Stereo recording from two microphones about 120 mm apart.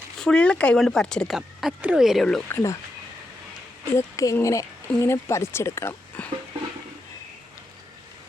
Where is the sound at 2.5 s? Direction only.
25° left (ahead or behind).